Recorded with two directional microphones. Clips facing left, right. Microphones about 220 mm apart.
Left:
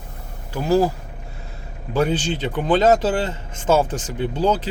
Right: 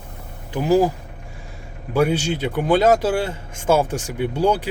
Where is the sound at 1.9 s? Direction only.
10° right (ahead or behind).